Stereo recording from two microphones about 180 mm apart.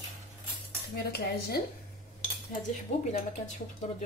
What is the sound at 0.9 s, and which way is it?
Cutlery, 60° left (ahead or behind).